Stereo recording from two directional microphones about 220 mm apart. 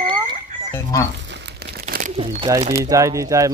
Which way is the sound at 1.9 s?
40° right (ahead or behind).